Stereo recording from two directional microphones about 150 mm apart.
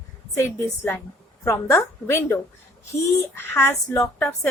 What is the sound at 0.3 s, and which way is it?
Speech, 15° left (ahead or behind).